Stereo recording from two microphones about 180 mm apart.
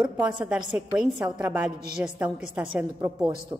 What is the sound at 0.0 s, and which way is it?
Speech, 25° right (ahead or behind).